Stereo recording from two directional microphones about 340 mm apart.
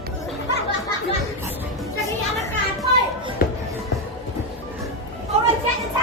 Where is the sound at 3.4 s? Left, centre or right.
Left.